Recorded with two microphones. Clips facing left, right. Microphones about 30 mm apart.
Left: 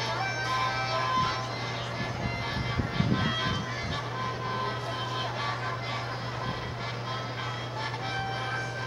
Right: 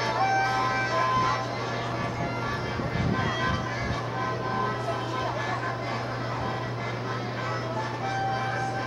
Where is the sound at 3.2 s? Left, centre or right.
Left.